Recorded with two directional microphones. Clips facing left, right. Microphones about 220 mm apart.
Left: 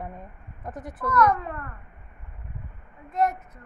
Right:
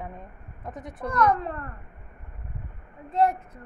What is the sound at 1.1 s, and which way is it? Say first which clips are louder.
Speech: left 1 dB; 30° right (ahead or behind).